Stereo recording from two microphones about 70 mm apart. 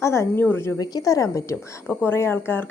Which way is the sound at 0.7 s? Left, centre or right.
Left.